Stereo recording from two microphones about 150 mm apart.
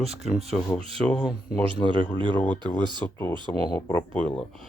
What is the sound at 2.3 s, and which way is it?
Speech, 10° left (ahead or behind).